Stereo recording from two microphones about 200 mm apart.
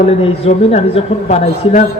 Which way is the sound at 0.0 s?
30° left (ahead or behind).